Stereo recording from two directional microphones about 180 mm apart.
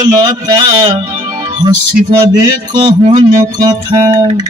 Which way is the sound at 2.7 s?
25° right (ahead or behind).